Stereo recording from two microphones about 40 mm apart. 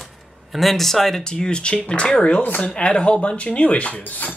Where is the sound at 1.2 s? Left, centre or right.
Centre; by 4.3 s left.